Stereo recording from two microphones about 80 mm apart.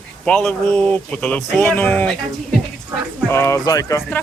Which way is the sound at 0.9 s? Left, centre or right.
Centre.